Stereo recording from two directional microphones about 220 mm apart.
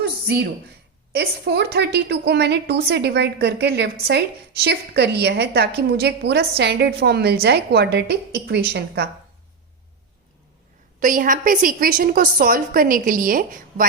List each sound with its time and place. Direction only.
0.0 s a sound: 45° right (ahead or behind)
1.1 s a woman's voice: 50° right (ahead or behind)
11.0 s a woman's voice: 40° right (ahead or behind)